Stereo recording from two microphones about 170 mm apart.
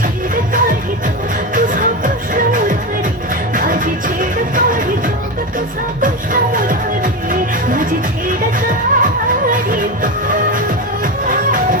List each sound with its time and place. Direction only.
0.5 s music: 55° right (ahead or behind)